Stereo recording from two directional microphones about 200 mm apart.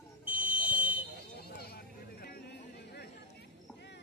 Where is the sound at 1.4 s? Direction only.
50° left (ahead or behind).